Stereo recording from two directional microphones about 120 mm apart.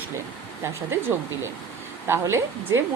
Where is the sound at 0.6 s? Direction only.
20° right (ahead or behind).